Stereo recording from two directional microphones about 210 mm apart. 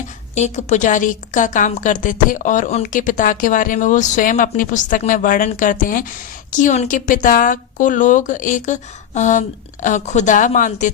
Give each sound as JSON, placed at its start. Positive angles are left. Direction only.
{"t": 0.3, "sound": "a woman's voice", "side_deg": 35}